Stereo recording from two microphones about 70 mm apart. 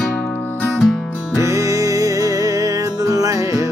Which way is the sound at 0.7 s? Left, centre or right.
Centre.